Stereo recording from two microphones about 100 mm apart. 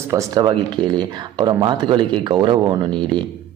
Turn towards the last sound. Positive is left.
turn(degrees=-55)  # may be behind; listen again after turning